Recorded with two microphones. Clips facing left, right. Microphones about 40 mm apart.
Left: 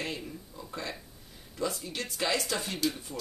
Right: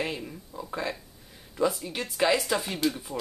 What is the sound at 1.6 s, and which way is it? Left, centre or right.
Speech, centre.